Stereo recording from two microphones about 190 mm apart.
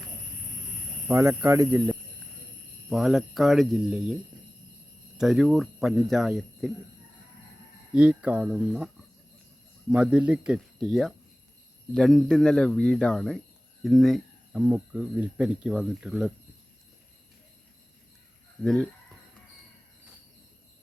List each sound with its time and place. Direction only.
1.0 s speech: 10° right (ahead or behind)
2.9 s speech: centre (ahead or behind)
7.9 s speech: 5° right (ahead or behind)
9.9 s speech: 5° right (ahead or behind)
18.6 s speech: 5° left (ahead or behind)